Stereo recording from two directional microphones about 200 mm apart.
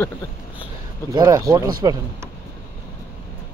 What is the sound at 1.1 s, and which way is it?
Speech, 20° right (ahead or behind).